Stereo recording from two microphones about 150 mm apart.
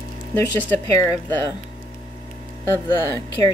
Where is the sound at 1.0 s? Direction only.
20° left (ahead or behind).